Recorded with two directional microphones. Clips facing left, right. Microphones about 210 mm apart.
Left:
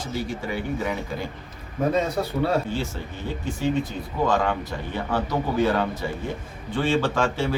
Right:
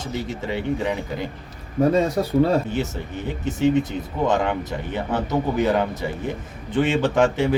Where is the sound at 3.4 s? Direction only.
20° right (ahead or behind).